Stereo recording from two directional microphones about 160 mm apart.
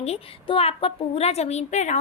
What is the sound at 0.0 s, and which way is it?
A woman's voice, 40° left (ahead or behind).